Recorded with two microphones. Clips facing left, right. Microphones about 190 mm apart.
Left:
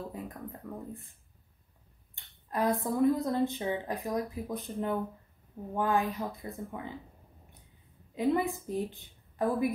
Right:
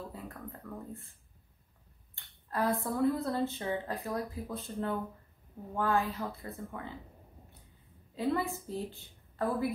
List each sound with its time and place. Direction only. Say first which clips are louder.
0.1 s speech: left 3 dB; 15° left (ahead or behind)
2.1 s speech: left 2 dB; 15° left (ahead or behind)
8.1 s a woman's voice: left 3 dB; 20° left (ahead or behind)